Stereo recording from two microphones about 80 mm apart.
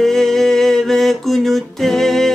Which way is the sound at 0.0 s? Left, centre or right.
Centre.